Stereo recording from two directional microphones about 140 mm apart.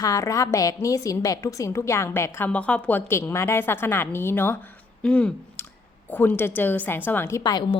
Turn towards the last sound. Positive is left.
turn(degrees=30)  # may be behind; listen again after turning